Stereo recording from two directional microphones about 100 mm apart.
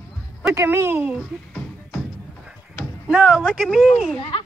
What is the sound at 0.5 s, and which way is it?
Speech, 25° right (ahead or behind).